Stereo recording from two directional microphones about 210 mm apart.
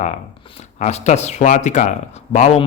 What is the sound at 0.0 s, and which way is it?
Speech, 30° left (ahead or behind).